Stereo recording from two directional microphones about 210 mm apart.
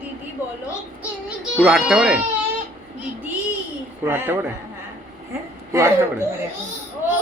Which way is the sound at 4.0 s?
10° right (ahead or behind).